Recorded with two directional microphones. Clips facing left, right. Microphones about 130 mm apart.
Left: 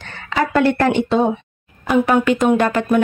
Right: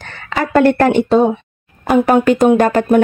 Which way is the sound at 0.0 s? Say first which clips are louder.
Even; 45° right (ahead or behind).